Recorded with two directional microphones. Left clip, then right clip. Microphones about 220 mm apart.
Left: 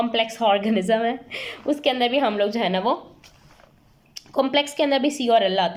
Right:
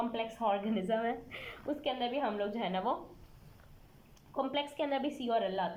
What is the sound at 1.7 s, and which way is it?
A woman's voice, 30° left (ahead or behind).